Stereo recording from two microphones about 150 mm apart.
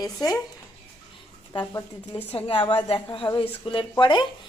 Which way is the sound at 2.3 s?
35° left (ahead or behind).